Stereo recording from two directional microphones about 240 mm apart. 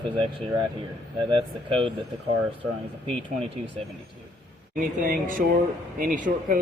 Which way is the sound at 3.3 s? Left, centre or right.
Right.